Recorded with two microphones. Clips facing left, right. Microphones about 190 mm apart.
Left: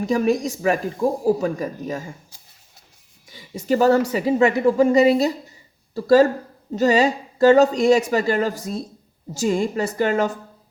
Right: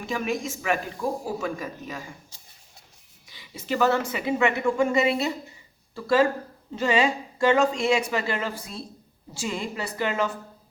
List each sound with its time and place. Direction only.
0.0 s speech: 40° left (ahead or behind)
3.2 s a woman's voice: 45° left (ahead or behind)